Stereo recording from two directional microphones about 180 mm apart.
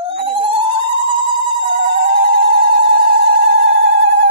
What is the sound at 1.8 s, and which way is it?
Telephone, 60° right (ahead or behind).